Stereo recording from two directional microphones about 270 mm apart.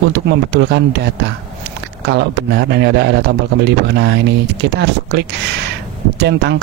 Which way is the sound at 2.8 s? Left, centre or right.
Right.